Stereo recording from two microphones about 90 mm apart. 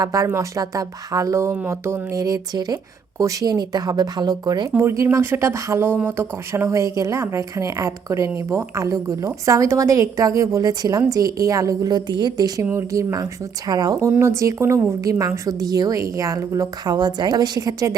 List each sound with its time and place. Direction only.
0.0 s speech: 40° right (ahead or behind)
4.7 s speech: 30° right (ahead or behind)
6.7 s speech: 35° right (ahead or behind)
12.7 s speech: 35° right (ahead or behind)
13.7 s speech: 50° right (ahead or behind)
14.1 s speech: 30° right (ahead or behind)
16.8 s speech: 50° right (ahead or behind)